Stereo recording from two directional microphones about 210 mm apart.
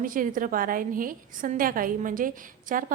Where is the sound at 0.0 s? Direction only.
40° right (ahead or behind).